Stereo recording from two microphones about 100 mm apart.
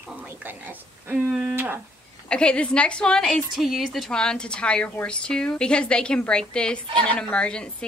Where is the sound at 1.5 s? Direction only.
20° right (ahead or behind).